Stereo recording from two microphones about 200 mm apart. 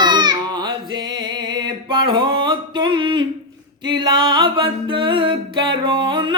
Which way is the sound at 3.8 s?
25° right (ahead or behind).